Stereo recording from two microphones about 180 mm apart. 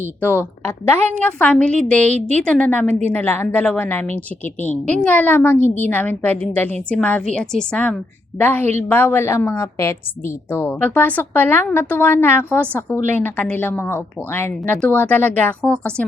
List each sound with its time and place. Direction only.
0.2 s a woman's voice: 10° left (ahead or behind)
2.0 s a woman's voice: 40° right (ahead or behind)
2.4 s a woman's voice: 5° left (ahead or behind)